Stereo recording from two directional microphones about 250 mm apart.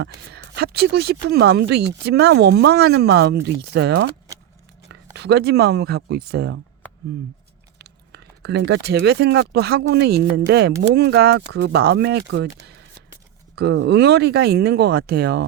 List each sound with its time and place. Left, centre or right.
0.0 s speech: right
7.8 s speech: right
13.6 s speech: right